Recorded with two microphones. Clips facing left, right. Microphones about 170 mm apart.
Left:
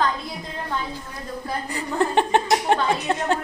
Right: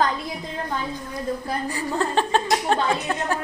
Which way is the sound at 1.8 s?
20° left (ahead or behind).